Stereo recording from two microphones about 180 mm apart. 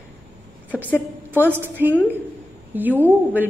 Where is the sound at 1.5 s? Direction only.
10° right (ahead or behind).